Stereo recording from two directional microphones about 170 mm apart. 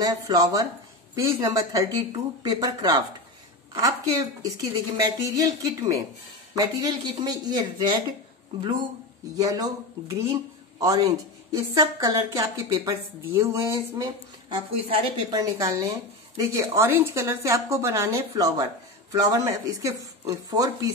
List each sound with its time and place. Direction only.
0.0 s speech: 20° right (ahead or behind)
9.4 s speech: 20° right (ahead or behind)